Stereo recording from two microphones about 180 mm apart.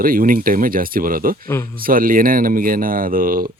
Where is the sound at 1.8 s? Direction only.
50° right (ahead or behind).